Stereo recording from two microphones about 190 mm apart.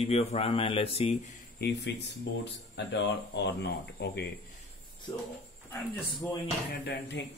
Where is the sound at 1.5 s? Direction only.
60° left (ahead or behind).